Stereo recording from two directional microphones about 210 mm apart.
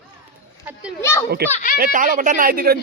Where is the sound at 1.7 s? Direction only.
40° right (ahead or behind).